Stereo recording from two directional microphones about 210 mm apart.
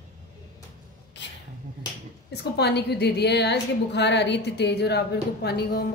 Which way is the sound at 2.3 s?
50° left (ahead or behind).